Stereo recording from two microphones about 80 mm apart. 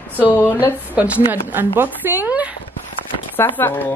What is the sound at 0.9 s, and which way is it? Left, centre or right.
Speech, centre.